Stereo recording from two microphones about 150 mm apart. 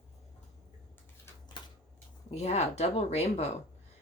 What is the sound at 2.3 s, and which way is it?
Speech, 45° left (ahead or behind).